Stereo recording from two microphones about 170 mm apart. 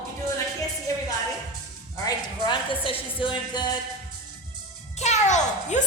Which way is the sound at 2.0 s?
30° left (ahead or behind).